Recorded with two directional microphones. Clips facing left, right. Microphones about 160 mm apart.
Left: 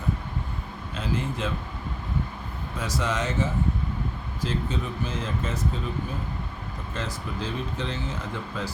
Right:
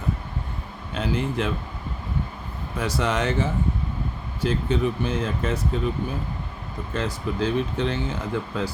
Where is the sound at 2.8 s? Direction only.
60° right (ahead or behind).